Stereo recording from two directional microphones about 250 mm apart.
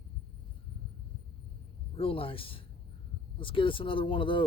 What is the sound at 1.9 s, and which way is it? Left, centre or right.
Speech, left.